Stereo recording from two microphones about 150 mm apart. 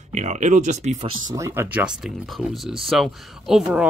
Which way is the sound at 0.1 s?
50° right (ahead or behind).